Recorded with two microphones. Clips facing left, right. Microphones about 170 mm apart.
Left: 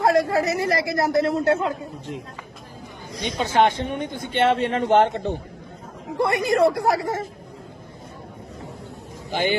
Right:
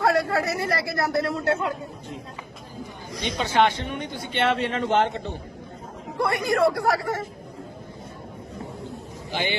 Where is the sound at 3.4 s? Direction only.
45° left (ahead or behind).